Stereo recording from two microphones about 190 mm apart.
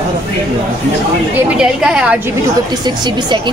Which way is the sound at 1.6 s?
5° right (ahead or behind).